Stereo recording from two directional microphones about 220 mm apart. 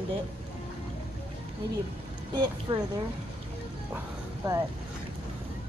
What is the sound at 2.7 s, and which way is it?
Speech, 20° right (ahead or behind).